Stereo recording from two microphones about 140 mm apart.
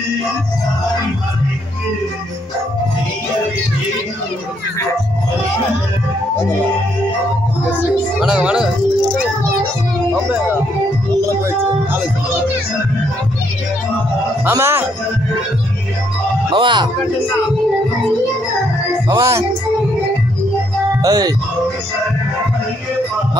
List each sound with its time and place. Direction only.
8.2 s speech: 5° right (ahead or behind)
11.1 s music: 20° right (ahead or behind)
14.5 s speech: 20° right (ahead or behind)
16.5 s speech: 35° right (ahead or behind)
19.0 s music: 25° right (ahead or behind)
21.0 s speech: 25° right (ahead or behind)